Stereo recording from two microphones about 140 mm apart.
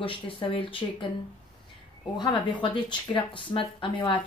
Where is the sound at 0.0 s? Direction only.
40° left (ahead or behind).